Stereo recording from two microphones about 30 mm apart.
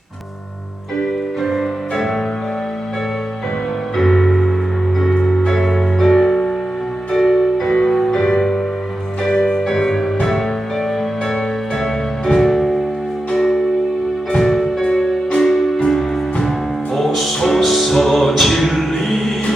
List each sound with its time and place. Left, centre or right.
1.4 s music: centre
3.9 s music: centre
5.1 s music: centre
5.5 s music: centre
11.8 s music: centre